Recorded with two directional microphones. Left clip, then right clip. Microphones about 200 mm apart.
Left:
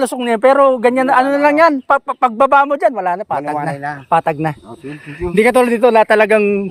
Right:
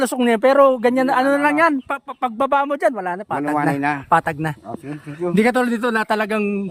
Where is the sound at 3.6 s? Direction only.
35° right (ahead or behind).